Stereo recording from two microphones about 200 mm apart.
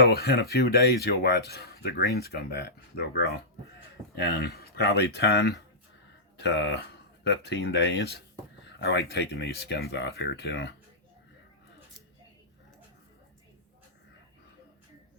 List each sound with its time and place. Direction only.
0.0 s speech: 50° left (ahead or behind)